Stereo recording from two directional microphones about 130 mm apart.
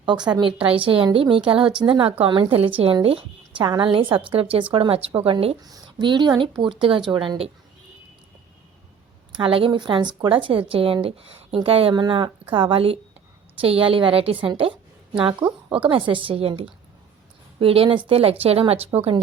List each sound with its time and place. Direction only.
0.3 s a woman's voice: 40° right (ahead or behind)
5.6 s a woman's voice: 35° right (ahead or behind)
9.3 s a woman's voice: 45° right (ahead or behind)